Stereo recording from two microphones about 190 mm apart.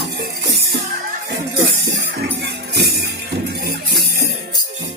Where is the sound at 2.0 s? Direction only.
60° right (ahead or behind).